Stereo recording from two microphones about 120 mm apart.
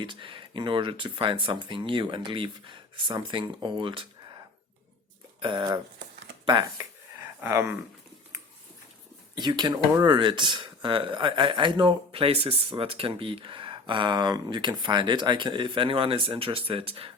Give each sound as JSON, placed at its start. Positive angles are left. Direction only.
{"t": 0.0, "sound": "a man's voice", "side_deg": -45}
{"t": 5.4, "sound": "speech", "side_deg": -40}
{"t": 6.4, "sound": "a sound", "side_deg": -40}
{"t": 7.4, "sound": "speech", "side_deg": -20}
{"t": 9.3, "sound": "a man's voice", "side_deg": -35}